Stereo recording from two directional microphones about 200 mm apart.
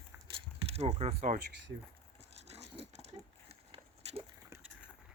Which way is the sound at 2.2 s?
30° right (ahead or behind).